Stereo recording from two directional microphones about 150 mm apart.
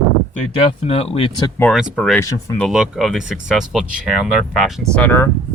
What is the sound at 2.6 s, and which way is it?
Speech, 5° right (ahead or behind).